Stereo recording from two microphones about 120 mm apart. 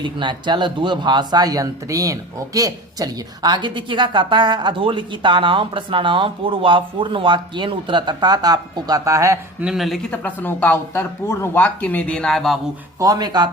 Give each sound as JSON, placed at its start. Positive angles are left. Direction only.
{"t": 0.0, "sound": "speech", "side_deg": -40}
{"t": 9.6, "sound": "speech", "side_deg": -5}
{"t": 13.0, "sound": "speech", "side_deg": -30}